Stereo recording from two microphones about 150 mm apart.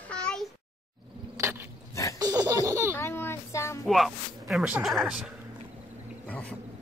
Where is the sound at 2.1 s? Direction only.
25° right (ahead or behind).